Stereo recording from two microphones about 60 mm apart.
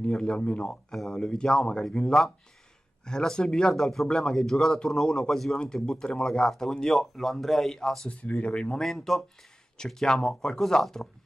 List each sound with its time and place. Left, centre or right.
0.0 s speech: centre
8.1 s speech: left
8.8 s speech: centre